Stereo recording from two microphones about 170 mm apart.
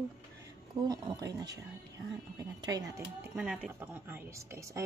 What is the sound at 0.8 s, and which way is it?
A woman's voice, 20° right (ahead or behind).